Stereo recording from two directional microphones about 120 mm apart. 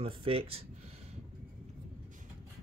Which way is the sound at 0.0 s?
50° right (ahead or behind).